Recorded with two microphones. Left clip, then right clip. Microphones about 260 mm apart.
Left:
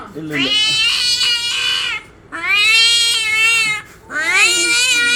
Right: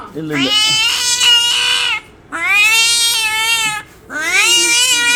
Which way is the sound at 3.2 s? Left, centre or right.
Right.